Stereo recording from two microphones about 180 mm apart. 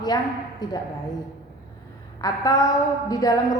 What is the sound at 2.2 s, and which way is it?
A woman's voice, 20° left (ahead or behind).